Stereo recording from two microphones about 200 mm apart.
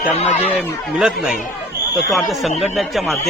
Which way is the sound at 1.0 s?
5° right (ahead or behind).